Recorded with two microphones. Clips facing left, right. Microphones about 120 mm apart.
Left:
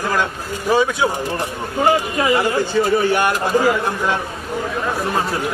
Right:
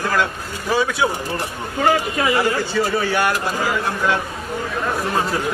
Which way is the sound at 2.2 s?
20° left (ahead or behind).